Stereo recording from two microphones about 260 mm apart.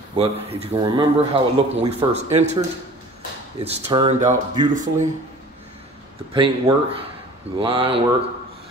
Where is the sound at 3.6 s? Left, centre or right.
Right.